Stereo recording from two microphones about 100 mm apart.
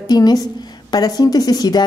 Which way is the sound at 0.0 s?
40° left (ahead or behind).